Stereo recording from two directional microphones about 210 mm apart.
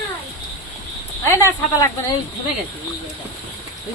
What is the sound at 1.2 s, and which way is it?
Speech, 10° left (ahead or behind).